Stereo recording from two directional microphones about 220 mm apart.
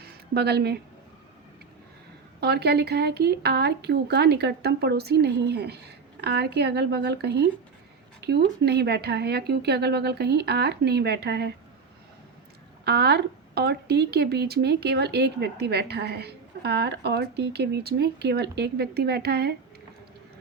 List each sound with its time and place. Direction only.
0.0 s a sound: 45° right (ahead or behind)
2.4 s speech: 45° right (ahead or behind)
12.8 s speech: 50° right (ahead or behind)